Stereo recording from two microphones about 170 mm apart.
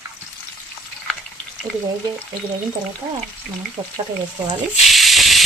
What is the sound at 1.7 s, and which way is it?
Frying, 5° left (ahead or behind).